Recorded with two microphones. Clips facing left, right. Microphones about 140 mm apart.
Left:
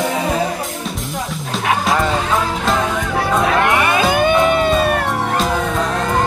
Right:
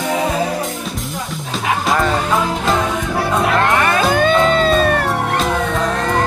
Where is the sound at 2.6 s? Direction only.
Centre (ahead or behind).